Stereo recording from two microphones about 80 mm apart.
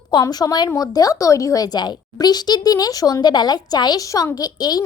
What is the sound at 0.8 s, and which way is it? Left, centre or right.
A woman's voice, left.